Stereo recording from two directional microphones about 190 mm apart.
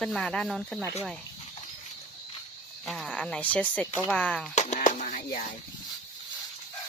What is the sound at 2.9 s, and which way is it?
Speech, centre (ahead or behind).